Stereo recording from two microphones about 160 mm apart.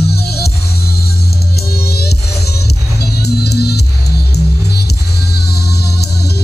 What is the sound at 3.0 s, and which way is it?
Music, 90° left.